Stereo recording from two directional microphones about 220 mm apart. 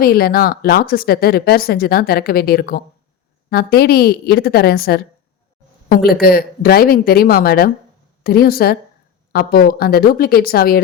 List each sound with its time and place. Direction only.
0.0 s speech: 45° left (ahead or behind)